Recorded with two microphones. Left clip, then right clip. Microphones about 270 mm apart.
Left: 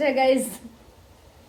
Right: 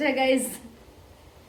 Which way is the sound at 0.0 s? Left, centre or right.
Centre.